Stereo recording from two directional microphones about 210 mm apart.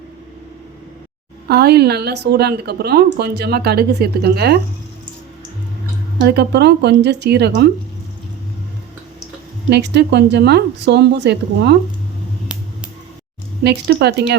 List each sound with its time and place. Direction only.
1.5 s a woman's voice: 50° right (ahead or behind)
6.1 s a woman's voice: 50° right (ahead or behind)
9.6 s a woman's voice: 55° right (ahead or behind)
12.5 s a sound: 5° right (ahead or behind)
13.7 s a woman's voice: 55° right (ahead or behind)